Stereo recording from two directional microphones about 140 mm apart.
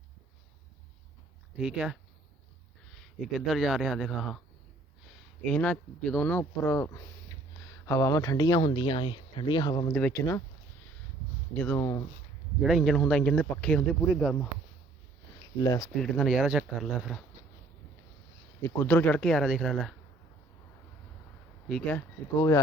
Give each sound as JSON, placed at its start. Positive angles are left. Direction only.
{"t": 1.5, "sound": "speech", "side_deg": -5}
{"t": 9.9, "sound": "speech", "side_deg": 15}
{"t": 11.5, "sound": "speech", "side_deg": 10}
{"t": 12.6, "sound": "speech", "side_deg": 0}
{"t": 15.6, "sound": "speech", "side_deg": 25}
{"t": 16.0, "sound": "speech", "side_deg": 0}
{"t": 18.8, "sound": "speech", "side_deg": 15}
{"t": 21.7, "sound": "speech", "side_deg": 5}
{"t": 21.9, "sound": "speech", "side_deg": 25}